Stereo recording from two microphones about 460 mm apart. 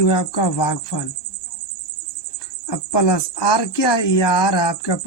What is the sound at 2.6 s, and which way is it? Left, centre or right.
Speech, left.